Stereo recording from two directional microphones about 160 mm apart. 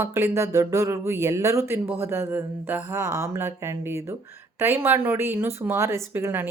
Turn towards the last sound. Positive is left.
turn(degrees=-15)  # may be behind; listen again after turning